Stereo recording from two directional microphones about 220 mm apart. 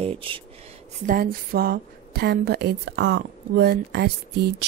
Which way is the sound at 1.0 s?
40° right (ahead or behind).